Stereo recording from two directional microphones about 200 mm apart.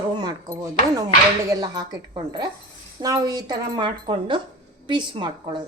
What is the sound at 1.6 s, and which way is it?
A woman's voice, 20° right (ahead or behind).